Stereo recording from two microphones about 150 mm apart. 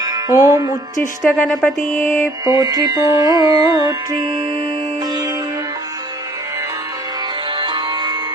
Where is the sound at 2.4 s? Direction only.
25° right (ahead or behind).